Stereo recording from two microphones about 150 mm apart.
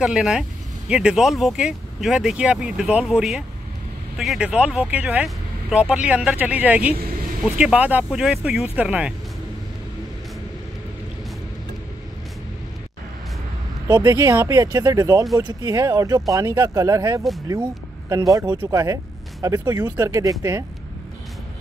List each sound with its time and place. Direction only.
0.0 s speech: 5° right (ahead or behind)
13.8 s speech: 30° right (ahead or behind)
18.6 s speech: 20° right (ahead or behind)